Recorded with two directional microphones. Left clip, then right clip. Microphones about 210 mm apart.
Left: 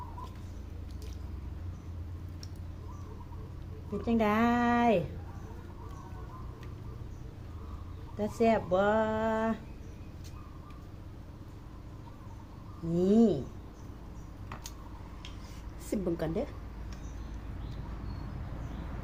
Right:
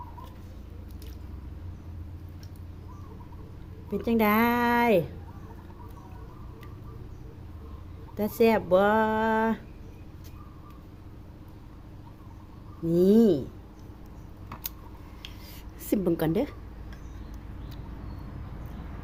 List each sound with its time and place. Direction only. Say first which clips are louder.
3.9 s speech: right 5 dB; 55° right (ahead or behind)
8.2 s speech: right 5 dB; 55° right (ahead or behind)
12.9 s speech: right 6 dB; 55° right (ahead or behind)
15.9 s a woman's voice: right 7 dB; 50° right (ahead or behind)